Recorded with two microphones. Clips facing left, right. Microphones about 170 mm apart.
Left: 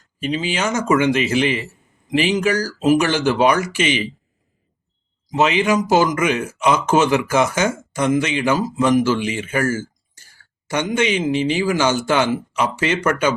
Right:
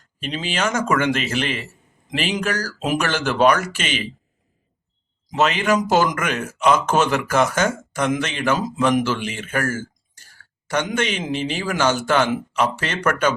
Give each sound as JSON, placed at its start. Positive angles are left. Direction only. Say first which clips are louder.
{"t": 0.2, "sound": "speech", "louder": "left 3 dB", "side_deg": 10}
{"t": 5.3, "sound": "speech", "louder": "left 2 dB", "side_deg": 15}
{"t": 9.6, "sound": "speech", "louder": "left 4 dB", "side_deg": -55}
{"t": 10.9, "sound": "speech", "louder": "left 5 dB", "side_deg": 10}